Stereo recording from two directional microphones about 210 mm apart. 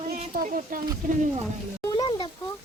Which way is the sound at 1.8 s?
20° left (ahead or behind).